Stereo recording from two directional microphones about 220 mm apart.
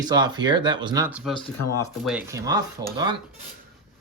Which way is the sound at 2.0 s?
5° right (ahead or behind).